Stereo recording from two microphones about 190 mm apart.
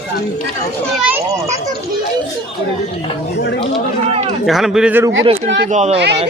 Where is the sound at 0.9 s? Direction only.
5° right (ahead or behind).